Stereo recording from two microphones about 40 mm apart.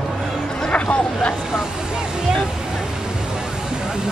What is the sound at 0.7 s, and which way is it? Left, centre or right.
Speech, left.